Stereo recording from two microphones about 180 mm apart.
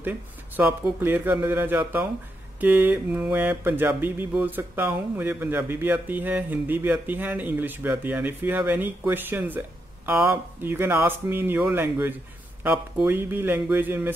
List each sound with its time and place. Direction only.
0.6 s mantra: 10° right (ahead or behind)